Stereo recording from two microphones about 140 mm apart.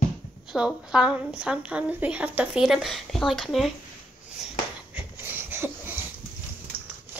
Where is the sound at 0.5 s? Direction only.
5° right (ahead or behind).